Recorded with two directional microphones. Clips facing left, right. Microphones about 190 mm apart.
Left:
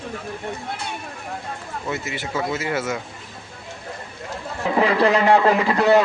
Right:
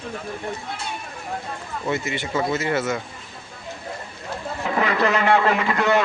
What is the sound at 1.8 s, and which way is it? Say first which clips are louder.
Speech: right 3 dB; centre (ahead or behind).